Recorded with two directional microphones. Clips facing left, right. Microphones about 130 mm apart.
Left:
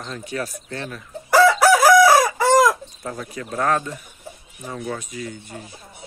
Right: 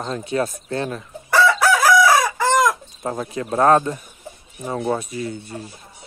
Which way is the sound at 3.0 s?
35° right (ahead or behind).